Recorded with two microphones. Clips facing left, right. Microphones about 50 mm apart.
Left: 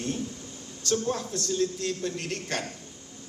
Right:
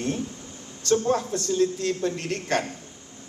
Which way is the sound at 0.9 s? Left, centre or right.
Right.